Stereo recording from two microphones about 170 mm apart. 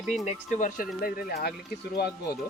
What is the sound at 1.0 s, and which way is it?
Speech, 65° left (ahead or behind).